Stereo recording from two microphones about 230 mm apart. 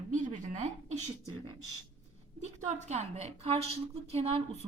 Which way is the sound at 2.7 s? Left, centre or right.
Right.